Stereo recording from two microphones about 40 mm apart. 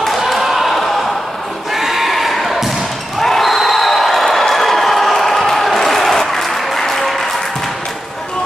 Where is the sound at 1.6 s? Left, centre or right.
Centre.